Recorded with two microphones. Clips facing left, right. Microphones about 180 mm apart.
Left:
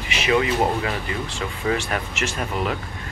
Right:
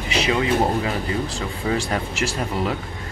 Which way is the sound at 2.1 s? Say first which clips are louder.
Right 2 dB; 30° right (ahead or behind).